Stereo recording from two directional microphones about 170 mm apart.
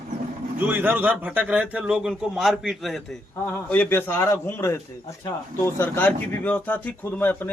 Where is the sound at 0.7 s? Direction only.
10° right (ahead or behind).